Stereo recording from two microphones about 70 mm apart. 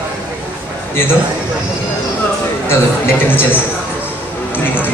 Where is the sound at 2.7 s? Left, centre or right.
Left.